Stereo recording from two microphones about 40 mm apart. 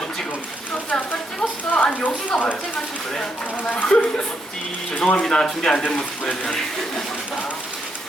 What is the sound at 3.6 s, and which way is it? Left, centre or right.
Speech, left.